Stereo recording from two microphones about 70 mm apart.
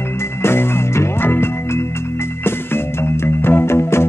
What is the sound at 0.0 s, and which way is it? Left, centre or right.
Music, left.